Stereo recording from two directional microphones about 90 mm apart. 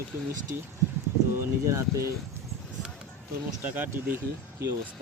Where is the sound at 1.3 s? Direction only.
35° right (ahead or behind).